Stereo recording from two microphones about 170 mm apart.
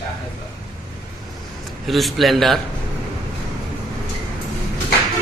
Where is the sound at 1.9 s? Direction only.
Centre (ahead or behind).